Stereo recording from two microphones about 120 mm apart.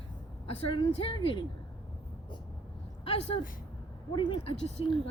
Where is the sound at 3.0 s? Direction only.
55° left (ahead or behind).